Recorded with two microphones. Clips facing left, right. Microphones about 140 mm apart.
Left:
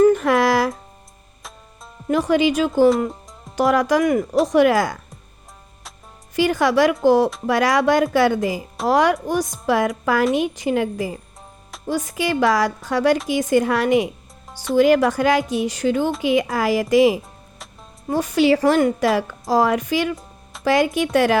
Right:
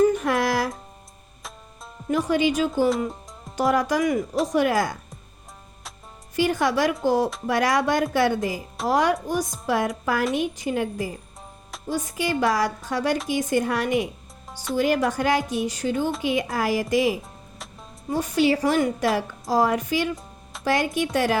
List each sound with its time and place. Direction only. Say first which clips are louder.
0.2 s music: left 6 dB; 90° left
2.0 s a woman's voice: left 4 dB; 90° left
4.0 s speech: left 4 dB; 55° left (ahead or behind)
4.4 s a woman's voice: left 6 dB; 85° left
6.3 s a woman's voice: left 4 dB; 90° left